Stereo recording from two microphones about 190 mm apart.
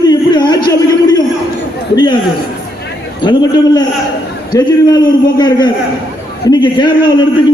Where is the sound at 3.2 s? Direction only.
20° left (ahead or behind).